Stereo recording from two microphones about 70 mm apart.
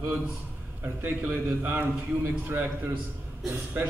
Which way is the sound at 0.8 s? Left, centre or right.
Right.